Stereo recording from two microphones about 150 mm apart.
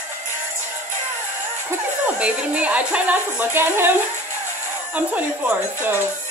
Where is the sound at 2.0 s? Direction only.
10° right (ahead or behind).